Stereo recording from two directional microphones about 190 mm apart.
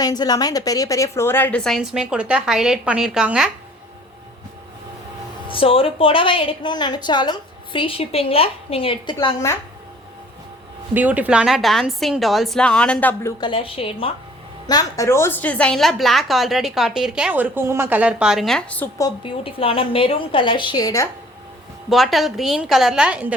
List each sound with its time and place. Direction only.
0.0 s a woman's voice: 20° left (ahead or behind); by 3.5 s 5° right (ahead or behind)
5.5 s a woman's voice: 30° left (ahead or behind)
9.1 s a woman's voice: 15° left (ahead or behind)
10.9 s a woman's voice: 10° right (ahead or behind); by 13.3 s 10° left (ahead or behind)
13.4 s a woman's voice: 25° left (ahead or behind)
14.7 s a woman's voice: 20° left (ahead or behind)
19.0 s a woman's voice: 30° left (ahead or behind)
21.8 s a woman's voice: centre (ahead or behind)